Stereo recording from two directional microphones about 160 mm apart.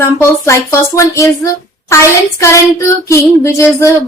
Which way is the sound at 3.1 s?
20° left (ahead or behind).